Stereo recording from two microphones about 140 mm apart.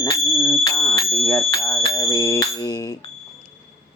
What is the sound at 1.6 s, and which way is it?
Bicycle bell, 25° left (ahead or behind).